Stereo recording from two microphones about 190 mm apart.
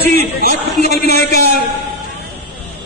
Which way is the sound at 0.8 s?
60° left (ahead or behind).